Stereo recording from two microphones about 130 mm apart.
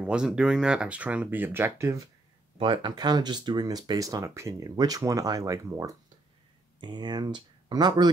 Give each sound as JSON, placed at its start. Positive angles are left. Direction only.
{"t": 0.0, "sound": "speech", "side_deg": -5}
{"t": 2.6, "sound": "speech", "side_deg": -35}